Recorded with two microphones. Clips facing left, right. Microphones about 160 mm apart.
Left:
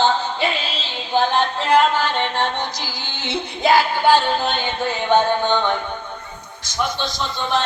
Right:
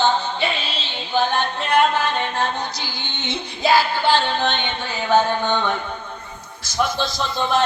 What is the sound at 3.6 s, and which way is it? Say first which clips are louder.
Music: left 2 dB; 15° left (ahead or behind).